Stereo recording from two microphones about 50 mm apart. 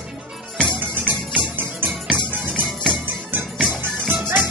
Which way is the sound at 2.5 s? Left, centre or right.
Centre.